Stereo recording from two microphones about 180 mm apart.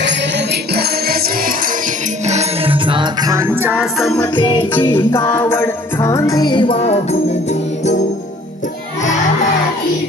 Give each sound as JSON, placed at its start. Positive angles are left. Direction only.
{"t": 0.0, "sound": "music", "side_deg": -65}
{"t": 2.2, "sound": "music", "side_deg": -40}
{"t": 3.8, "sound": "music", "side_deg": 0}
{"t": 4.2, "sound": "music", "side_deg": 25}